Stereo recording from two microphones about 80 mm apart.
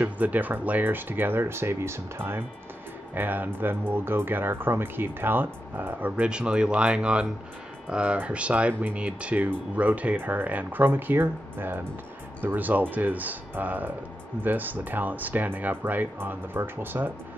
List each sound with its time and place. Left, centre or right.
0.0 s speech: right